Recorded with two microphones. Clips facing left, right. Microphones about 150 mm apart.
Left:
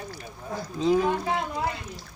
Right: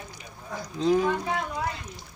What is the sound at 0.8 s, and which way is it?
Speech, 5° left (ahead or behind).